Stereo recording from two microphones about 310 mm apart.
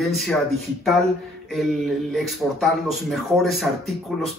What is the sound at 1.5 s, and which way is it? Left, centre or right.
Speech, centre.